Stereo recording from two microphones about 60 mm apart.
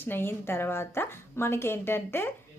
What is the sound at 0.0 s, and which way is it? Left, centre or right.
A woman's voice, left.